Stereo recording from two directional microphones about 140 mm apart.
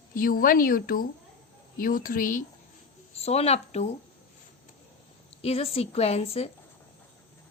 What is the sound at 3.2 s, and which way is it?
Speech, 50° left (ahead or behind).